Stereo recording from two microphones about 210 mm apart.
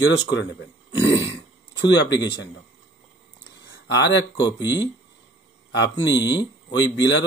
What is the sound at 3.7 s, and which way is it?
Speech, 55° left (ahead or behind).